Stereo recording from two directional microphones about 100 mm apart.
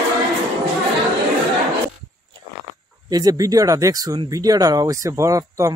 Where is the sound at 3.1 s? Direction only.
35° right (ahead or behind).